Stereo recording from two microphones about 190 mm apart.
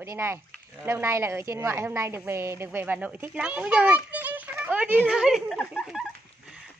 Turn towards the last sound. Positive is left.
turn(degrees=0)  # may be behind; listen again after turning